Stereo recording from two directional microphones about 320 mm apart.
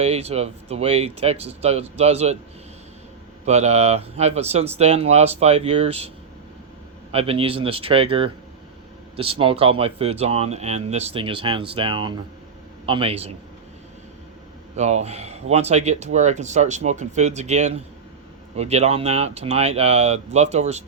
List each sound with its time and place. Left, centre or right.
0.0 s speech: centre
3.4 s speech: right
7.1 s speech: centre
14.8 s speech: right